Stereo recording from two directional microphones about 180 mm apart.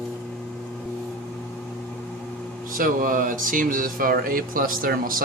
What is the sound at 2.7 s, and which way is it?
Speech, 50° right (ahead or behind).